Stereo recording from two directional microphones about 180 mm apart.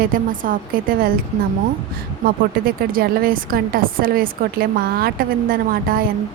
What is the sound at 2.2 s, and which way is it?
A woman's voice, 55° right (ahead or behind).